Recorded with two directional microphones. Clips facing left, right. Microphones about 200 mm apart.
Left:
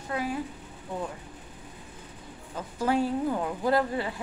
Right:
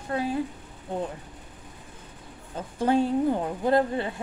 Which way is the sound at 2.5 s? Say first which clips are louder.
Right 3 dB; 30° right (ahead or behind).